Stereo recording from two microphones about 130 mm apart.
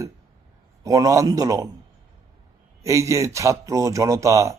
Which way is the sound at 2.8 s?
25° right (ahead or behind).